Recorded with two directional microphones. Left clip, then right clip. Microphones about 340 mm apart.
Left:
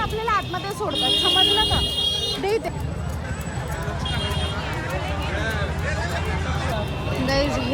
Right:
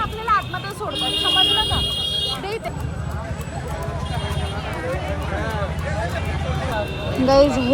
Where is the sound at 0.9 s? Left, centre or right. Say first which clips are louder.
Left 1 dB; left.